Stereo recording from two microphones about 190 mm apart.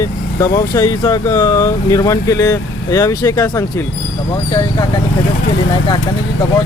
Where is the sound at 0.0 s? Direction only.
15° left (ahead or behind).